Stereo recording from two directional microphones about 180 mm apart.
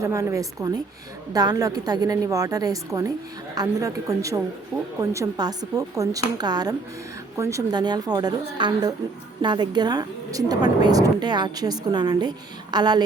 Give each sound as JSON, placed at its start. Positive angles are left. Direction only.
{"t": 0.0, "sound": "a woman's voice", "side_deg": -15}